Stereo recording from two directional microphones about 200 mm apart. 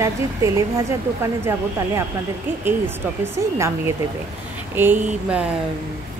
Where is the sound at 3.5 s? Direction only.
15° right (ahead or behind).